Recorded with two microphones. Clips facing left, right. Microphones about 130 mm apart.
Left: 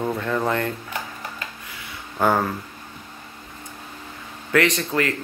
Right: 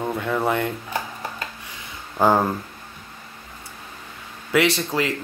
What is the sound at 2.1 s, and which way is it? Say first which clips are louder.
Speech: right 2 dB; 20° right (ahead or behind).